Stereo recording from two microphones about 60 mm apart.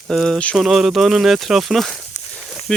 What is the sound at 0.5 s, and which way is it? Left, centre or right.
Speech, centre.